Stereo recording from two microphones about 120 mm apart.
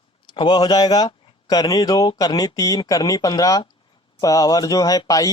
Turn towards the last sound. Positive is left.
turn(degrees=30)  # may be behind; listen again after turning